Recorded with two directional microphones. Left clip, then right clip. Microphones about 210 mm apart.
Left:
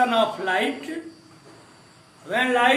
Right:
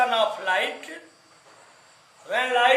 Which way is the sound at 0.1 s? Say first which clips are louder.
Left 1 dB; 25° right (ahead or behind).